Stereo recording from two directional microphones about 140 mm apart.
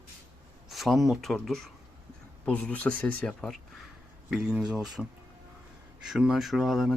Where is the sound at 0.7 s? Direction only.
Centre (ahead or behind).